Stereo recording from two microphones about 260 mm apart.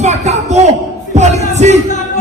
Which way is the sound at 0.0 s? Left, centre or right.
Right.